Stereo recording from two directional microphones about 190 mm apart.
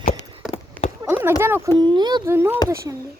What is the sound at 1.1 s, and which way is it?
Speech, 10° right (ahead or behind).